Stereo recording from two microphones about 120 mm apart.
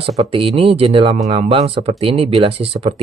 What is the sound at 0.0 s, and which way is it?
Speech, 50° right (ahead or behind).